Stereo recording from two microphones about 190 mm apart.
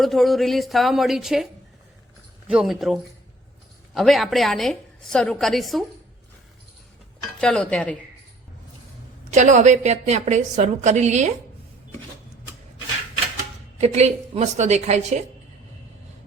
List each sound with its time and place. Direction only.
0.0 s a woman's voice: centre (ahead or behind)
2.5 s a woman's voice: centre (ahead or behind)
7.4 s a woman's voice: 5° left (ahead or behind)
9.3 s a woman's voice: 40° right (ahead or behind)
13.7 s a woman's voice: 35° right (ahead or behind)